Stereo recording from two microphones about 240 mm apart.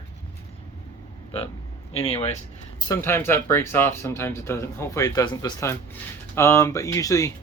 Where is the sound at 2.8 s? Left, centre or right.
Centre.